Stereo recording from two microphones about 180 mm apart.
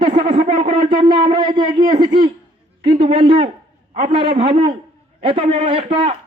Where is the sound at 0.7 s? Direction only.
30° right (ahead or behind).